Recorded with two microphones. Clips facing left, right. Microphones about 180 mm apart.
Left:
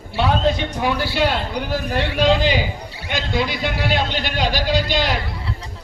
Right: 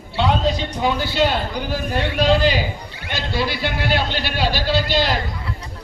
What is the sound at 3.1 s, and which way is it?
A man's voice, 20° left (ahead or behind).